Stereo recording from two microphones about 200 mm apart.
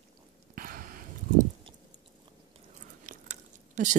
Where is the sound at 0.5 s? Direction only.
45° right (ahead or behind).